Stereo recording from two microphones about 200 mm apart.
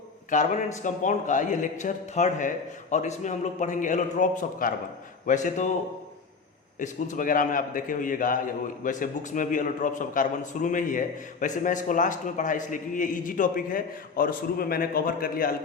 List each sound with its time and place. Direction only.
0.3 s a man's voice: 35° left (ahead or behind)
6.7 s a man's voice: 40° left (ahead or behind)